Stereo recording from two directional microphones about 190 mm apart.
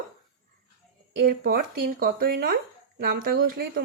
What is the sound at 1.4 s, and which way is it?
Speech, 50° right (ahead or behind).